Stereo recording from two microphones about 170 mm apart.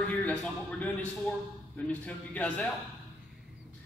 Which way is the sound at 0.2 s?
10° left (ahead or behind).